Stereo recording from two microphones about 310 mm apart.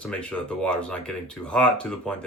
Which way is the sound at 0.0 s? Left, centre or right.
Centre.